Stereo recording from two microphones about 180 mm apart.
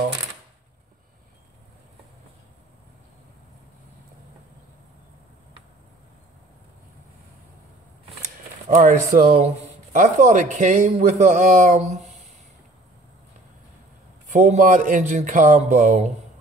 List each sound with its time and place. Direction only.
8.6 s a man's voice: 45° right (ahead or behind)
14.2 s a man's voice: 40° right (ahead or behind)